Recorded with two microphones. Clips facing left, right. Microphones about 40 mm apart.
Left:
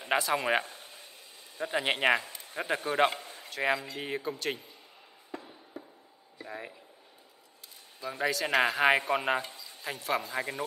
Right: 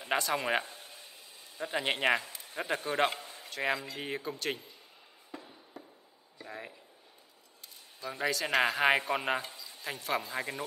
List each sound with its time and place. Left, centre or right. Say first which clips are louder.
0.0 s speech: left 3 dB; centre
3.2 s a sound: left 1 dB; left
3.4 s speech: left 3 dB; centre
5.3 s a sound: left 4 dB; centre
6.3 s speech: left 3 dB; centre
8.0 s speech: left 2 dB; centre